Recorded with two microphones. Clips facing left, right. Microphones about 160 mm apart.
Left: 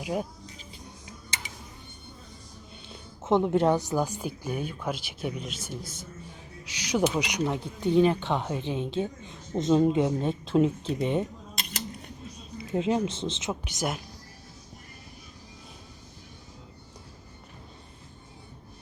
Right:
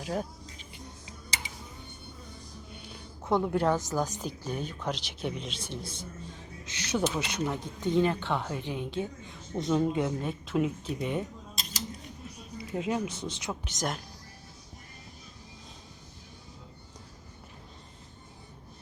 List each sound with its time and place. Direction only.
0.0 s speech: 10° left (ahead or behind)
2.8 s music: 25° left (ahead or behind)
3.9 s speech: 10° left (ahead or behind)
11.5 s a sound: 60° left (ahead or behind)
12.5 s speech: 25° left (ahead or behind)
13.7 s speech: 10° left (ahead or behind)